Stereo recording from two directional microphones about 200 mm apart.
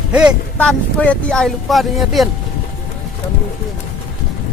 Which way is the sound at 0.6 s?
5° left (ahead or behind).